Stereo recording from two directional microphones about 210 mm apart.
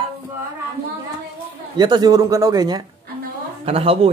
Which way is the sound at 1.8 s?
20° right (ahead or behind).